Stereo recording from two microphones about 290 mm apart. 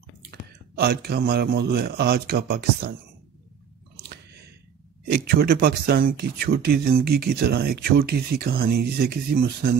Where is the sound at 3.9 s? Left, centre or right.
Right.